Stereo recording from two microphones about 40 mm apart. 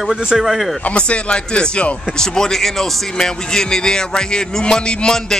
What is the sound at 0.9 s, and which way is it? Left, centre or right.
Speech, left.